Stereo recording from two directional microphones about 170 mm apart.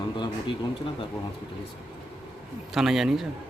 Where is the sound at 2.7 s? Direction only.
5° right (ahead or behind).